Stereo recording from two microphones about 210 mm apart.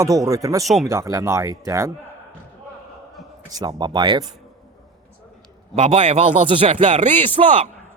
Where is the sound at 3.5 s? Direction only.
20° right (ahead or behind).